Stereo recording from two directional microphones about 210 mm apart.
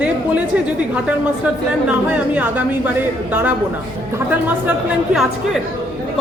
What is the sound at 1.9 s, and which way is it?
A man's voice, 5° right (ahead or behind).